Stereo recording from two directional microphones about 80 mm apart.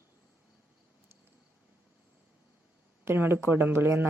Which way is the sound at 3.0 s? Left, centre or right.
Right.